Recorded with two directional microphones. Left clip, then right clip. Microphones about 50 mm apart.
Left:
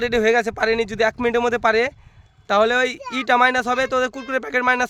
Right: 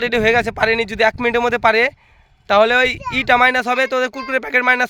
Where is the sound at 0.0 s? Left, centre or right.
Right.